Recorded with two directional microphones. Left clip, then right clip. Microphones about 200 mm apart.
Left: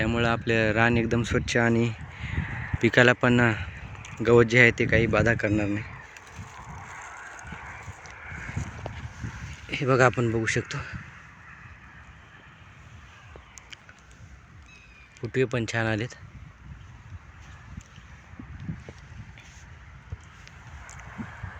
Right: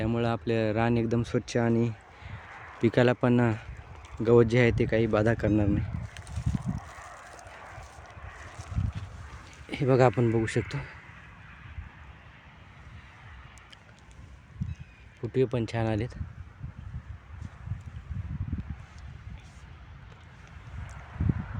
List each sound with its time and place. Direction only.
0.0 s speech: 5° right (ahead or behind)
2.3 s a sound: 60° right (ahead or behind)
2.8 s speech: 5° right (ahead or behind)
6.7 s a sound: 40° right (ahead or behind)
9.6 s speech: 20° right (ahead or behind)
15.2 s speech: 10° right (ahead or behind)